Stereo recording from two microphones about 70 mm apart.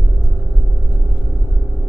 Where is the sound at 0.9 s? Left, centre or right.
Centre.